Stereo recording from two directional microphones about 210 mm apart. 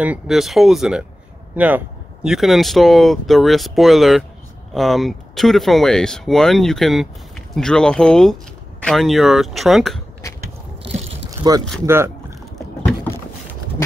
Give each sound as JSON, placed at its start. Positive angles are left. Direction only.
{"t": 0.0, "sound": "speech", "side_deg": -5}
{"t": 2.2, "sound": "speech", "side_deg": 0}
{"t": 10.2, "sound": "biting", "side_deg": 15}
{"t": 11.2, "sound": "a sound", "side_deg": -15}
{"t": 11.8, "sound": "speech", "side_deg": -10}